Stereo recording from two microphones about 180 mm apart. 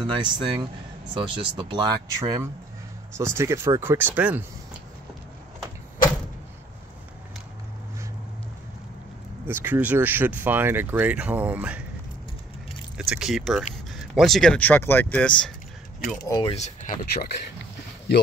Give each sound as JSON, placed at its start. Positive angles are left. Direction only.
{"t": 0.0, "sound": "speech", "side_deg": -25}
{"t": 9.5, "sound": "speech", "side_deg": -10}
{"t": 13.1, "sound": "speech", "side_deg": 0}
{"t": 16.3, "sound": "speech", "side_deg": 20}
{"t": 16.5, "sound": "speech", "side_deg": 40}
{"t": 17.0, "sound": "speech", "side_deg": 60}